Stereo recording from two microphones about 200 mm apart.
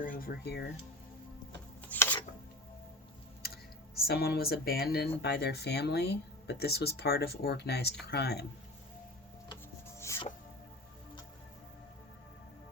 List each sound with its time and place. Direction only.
0.0 s speech: 45° left (ahead or behind)
1.9 s chopping: 10° left (ahead or behind)
4.0 s speech: 50° left (ahead or behind)
10.0 s music: 15° left (ahead or behind)